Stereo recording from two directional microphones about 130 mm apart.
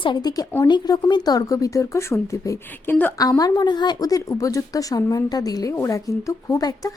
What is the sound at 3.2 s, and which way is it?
A woman's voice, 30° left (ahead or behind).